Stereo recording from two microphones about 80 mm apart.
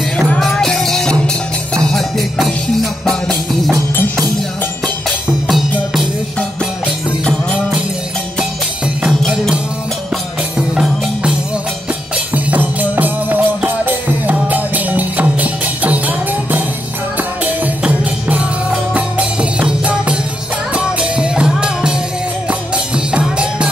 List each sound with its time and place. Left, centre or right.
0.4 s music: centre
9.2 s music: centre
12.4 s music: right
18.9 s music: centre
23.1 s music: centre